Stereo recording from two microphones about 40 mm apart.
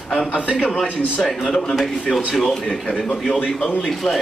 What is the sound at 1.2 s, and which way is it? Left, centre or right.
Speech, centre.